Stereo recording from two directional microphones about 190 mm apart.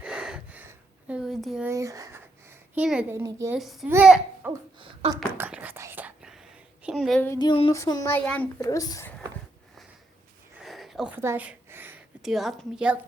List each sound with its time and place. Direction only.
0.0 s a sound: 5° right (ahead or behind)
1.6 s a child's voice: 15° right (ahead or behind)
3.6 s a child's voice: centre (ahead or behind)
4.8 s speech: 25° right (ahead or behind)
5.1 s whispering: 10° right (ahead or behind)
6.8 s a woman's voice: centre (ahead or behind)
7.3 s a sound: 20° left (ahead or behind)
7.7 s a child's voice: 15° left (ahead or behind)
10.6 s a sound: centre (ahead or behind)